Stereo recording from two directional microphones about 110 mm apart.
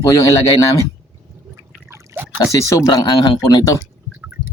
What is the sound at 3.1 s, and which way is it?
Speech, 45° left (ahead or behind).